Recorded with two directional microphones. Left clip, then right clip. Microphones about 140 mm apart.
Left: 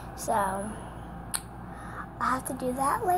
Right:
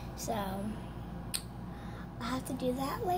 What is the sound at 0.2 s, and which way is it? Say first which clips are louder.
Speech: left 10 dB; 20° right (ahead or behind).